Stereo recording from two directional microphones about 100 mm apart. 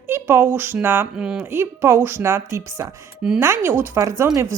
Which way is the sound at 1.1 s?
10° right (ahead or behind).